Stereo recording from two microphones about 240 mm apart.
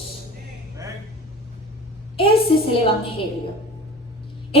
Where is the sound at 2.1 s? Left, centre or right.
Left.